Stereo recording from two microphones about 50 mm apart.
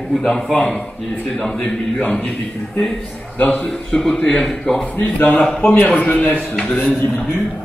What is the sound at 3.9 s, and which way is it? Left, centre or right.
A man's voice, centre.